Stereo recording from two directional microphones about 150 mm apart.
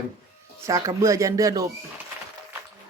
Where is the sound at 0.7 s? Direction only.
20° right (ahead or behind).